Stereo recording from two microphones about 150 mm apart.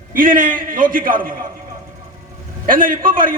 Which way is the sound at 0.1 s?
65° right (ahead or behind).